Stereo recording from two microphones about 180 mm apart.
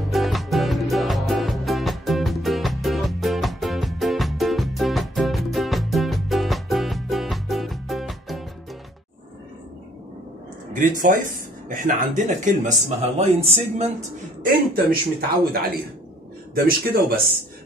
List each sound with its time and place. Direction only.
0.1 s music: centre (ahead or behind)
10.7 s speech: 45° right (ahead or behind)
14.5 s a man's voice: 55° right (ahead or behind)